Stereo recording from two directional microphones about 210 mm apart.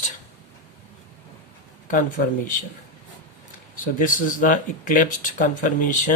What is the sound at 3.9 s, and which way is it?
Speech, 40° left (ahead or behind).